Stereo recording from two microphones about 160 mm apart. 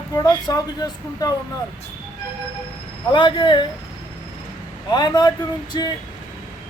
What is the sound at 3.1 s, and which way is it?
Speech, 30° left (ahead or behind).